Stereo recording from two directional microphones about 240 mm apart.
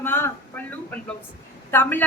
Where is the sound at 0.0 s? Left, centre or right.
Centre.